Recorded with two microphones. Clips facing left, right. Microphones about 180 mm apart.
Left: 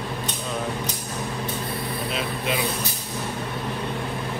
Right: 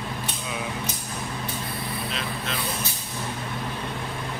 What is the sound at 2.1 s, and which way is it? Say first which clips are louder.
Speech: left 5 dB; 5° left (ahead or behind).